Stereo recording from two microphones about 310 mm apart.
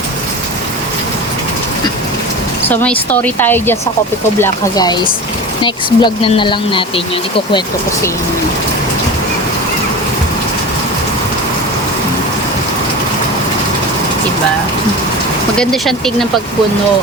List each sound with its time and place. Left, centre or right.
2.6 s speech: centre
15.5 s speech: centre